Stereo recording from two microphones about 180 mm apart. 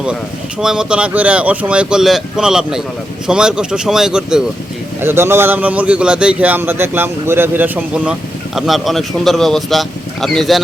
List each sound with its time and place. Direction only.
0.6 s a man's voice: 5° right (ahead or behind)